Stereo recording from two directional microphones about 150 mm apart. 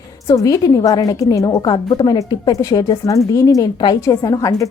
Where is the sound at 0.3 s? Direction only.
25° left (ahead or behind).